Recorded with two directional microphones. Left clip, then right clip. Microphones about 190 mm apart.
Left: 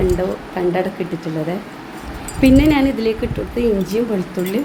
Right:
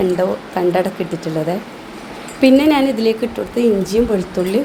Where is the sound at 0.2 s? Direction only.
10° right (ahead or behind).